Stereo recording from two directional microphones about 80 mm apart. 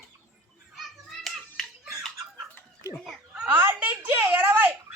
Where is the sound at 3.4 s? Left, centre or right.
Right.